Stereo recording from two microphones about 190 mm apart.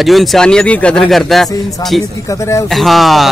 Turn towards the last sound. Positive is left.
turn(degrees=0)  # may be behind; listen again after turning